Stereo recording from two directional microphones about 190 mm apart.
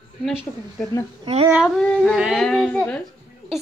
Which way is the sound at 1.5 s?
Centre (ahead or behind).